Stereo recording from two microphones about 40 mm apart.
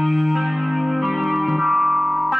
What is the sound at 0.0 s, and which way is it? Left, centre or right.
Music, centre.